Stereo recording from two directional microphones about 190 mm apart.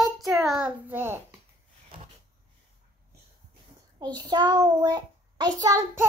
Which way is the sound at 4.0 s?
20° right (ahead or behind).